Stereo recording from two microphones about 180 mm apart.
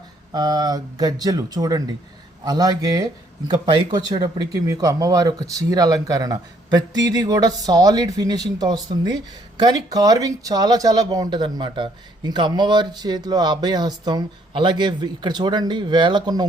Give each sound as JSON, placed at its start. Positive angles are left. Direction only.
{"t": 0.3, "sound": "speech", "side_deg": -20}